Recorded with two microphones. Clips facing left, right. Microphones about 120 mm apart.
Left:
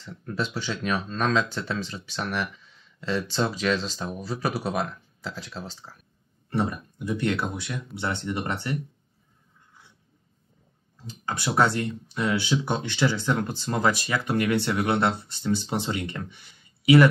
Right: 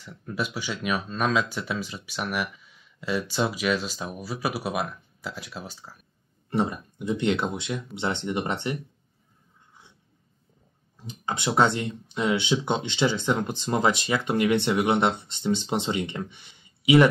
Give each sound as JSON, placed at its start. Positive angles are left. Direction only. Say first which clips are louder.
{"t": 0.0, "sound": "speech", "louder": "left 1 dB", "side_deg": -10}
{"t": 6.5, "sound": "speech", "louder": "right 1 dB", "side_deg": -20}
{"t": 11.0, "sound": "speech", "louder": "right 1 dB", "side_deg": -20}